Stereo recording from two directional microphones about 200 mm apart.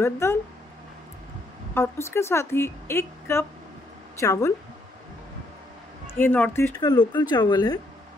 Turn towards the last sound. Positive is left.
turn(degrees=20)  # may be behind; listen again after turning